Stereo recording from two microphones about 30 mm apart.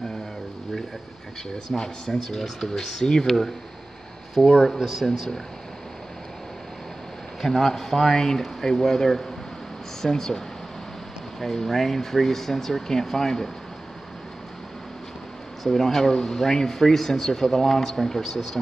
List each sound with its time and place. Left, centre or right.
1.7 s speech: centre
2.0 s speech: centre
4.4 s speech: left
5.0 s speech: centre
7.4 s speech: centre
15.6 s speech: centre